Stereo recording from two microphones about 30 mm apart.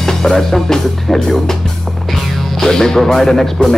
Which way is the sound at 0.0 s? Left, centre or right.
Centre.